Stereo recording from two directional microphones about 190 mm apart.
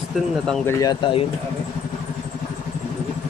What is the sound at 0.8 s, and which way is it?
Speech, 25° left (ahead or behind).